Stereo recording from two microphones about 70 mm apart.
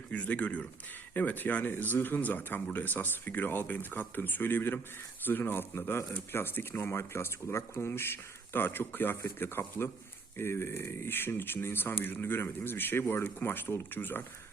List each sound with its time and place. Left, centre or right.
0.1 s speech: centre